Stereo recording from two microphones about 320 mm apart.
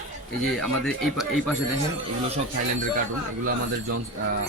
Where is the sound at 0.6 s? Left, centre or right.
Centre.